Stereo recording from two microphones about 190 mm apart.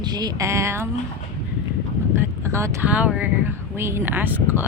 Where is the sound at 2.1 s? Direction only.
15° right (ahead or behind).